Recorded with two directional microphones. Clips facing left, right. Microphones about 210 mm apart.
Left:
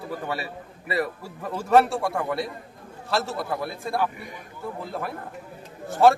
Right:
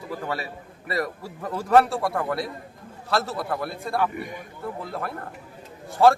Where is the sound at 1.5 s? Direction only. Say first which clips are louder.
Even; centre (ahead or behind).